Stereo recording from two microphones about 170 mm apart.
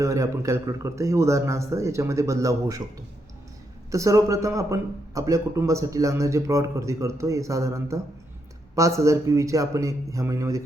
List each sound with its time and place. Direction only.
0.0 s a man's voice: 20° right (ahead or behind)
3.9 s speech: 20° right (ahead or behind)